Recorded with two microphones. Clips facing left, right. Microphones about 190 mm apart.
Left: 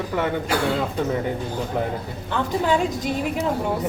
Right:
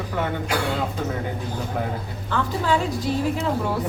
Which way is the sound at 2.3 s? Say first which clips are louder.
Left 1 dB; 20° left (ahead or behind).